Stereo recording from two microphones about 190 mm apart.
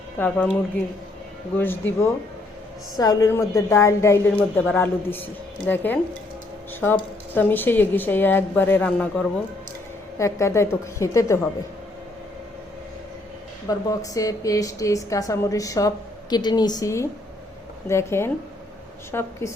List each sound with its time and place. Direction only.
0.2 s a woman's voice: 5° left (ahead or behind)
1.5 s a woman's voice: 10° left (ahead or behind)
13.7 s a woman's voice: 20° left (ahead or behind)